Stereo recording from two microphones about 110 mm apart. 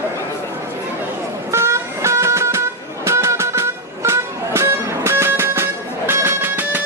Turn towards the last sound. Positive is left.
turn(degrees=-15)  # may be behind; listen again after turning